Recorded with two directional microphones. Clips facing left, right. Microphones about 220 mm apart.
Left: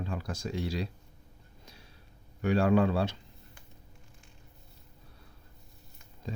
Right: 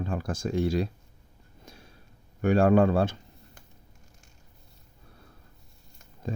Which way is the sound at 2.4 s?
50° right (ahead or behind).